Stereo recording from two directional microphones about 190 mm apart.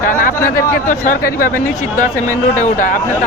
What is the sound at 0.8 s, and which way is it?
Speech, 45° left (ahead or behind).